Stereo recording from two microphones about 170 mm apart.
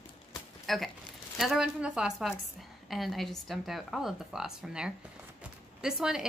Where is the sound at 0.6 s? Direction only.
Centre (ahead or behind).